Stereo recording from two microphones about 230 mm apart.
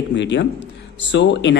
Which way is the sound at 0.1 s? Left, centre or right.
Left.